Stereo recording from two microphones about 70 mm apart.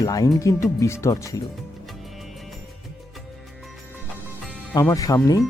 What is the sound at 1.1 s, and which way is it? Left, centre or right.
Speech, left.